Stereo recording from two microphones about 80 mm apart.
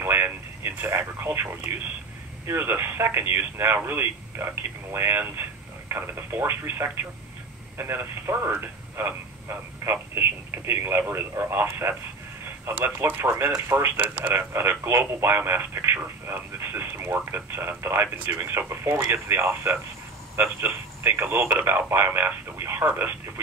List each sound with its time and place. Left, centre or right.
0.0 s radio: right
2.4 s speech: right